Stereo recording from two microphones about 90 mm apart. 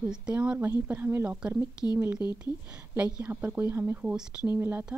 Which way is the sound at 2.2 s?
50° left (ahead or behind).